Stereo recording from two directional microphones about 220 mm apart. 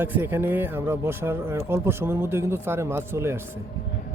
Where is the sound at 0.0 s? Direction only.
10° right (ahead or behind).